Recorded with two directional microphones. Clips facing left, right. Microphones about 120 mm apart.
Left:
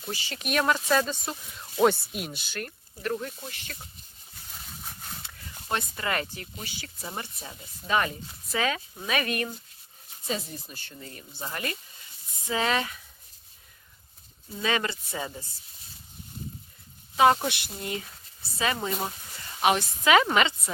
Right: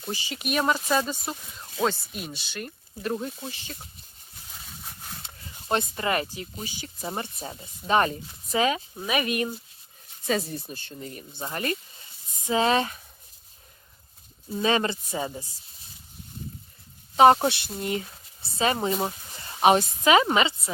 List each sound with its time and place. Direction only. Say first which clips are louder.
0.1 s speech: right 1 dB; 15° right (ahead or behind)
1.8 s speech: left 4 dB; 5° left (ahead or behind)
2.6 s speech: right 2 dB; 20° right (ahead or behind)
4.5 s a sound: even; centre (ahead or behind)
5.2 s speech: even; 25° right (ahead or behind)
7.3 s speech: right 5 dB; 35° right (ahead or behind)
8.4 s speech: right 4 dB; 20° right (ahead or behind)
10.8 s speech: right 5 dB; 25° right (ahead or behind)
14.6 s speech: right 4 dB; 30° right (ahead or behind)
17.2 s speech: right 4 dB; 35° right (ahead or behind)